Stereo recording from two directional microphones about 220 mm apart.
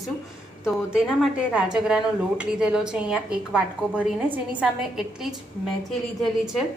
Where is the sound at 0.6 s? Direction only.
5° right (ahead or behind).